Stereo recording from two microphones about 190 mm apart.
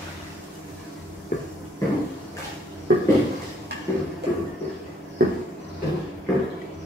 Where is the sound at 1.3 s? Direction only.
45° left (ahead or behind).